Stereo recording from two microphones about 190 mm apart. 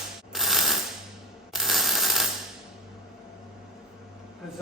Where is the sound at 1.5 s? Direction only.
Centre (ahead or behind).